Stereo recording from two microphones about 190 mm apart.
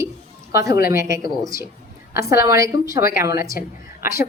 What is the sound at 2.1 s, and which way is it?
A woman's voice, 15° right (ahead or behind).